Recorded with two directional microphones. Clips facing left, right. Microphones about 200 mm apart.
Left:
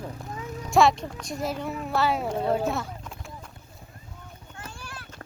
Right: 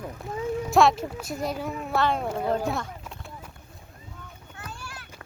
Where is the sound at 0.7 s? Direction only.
Centre (ahead or behind).